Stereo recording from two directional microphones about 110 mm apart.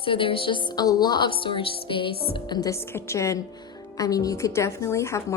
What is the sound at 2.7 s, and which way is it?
A woman's voice, 25° left (ahead or behind).